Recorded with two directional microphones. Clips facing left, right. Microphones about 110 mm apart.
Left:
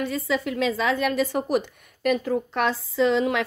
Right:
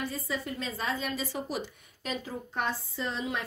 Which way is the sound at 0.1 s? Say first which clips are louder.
Left 9 dB; 85° left.